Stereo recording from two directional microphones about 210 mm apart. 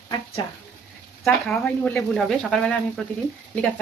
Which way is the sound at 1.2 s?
5° left (ahead or behind).